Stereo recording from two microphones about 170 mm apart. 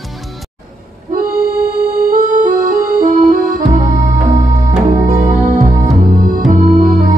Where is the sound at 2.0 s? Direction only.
55° right (ahead or behind).